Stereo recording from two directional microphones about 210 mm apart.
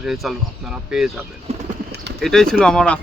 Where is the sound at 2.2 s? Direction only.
Centre (ahead or behind).